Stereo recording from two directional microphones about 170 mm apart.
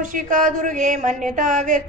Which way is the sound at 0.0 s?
50° right (ahead or behind).